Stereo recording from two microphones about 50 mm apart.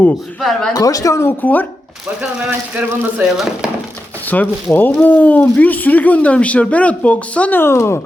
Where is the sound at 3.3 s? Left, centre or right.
Centre.